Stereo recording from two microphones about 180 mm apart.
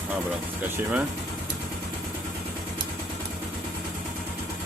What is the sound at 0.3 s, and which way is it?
Speech, 10° right (ahead or behind).